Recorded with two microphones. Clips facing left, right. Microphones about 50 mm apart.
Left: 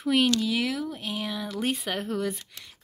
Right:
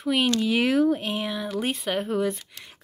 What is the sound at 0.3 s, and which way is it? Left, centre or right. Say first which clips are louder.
Speech: right 4 dB; right.